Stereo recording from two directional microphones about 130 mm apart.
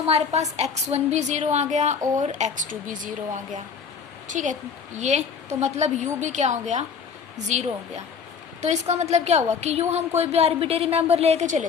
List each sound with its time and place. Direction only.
0.0 s a woman's voice: 55° right (ahead or behind); by 3.6 s 85° right
4.3 s a woman's voice: 75° right (ahead or behind)
4.9 s a woman's voice: 60° right (ahead or behind)
8.6 s a woman's voice: 60° right (ahead or behind)